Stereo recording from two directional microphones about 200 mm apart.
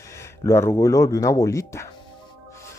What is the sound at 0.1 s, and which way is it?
Speech, 15° left (ahead or behind).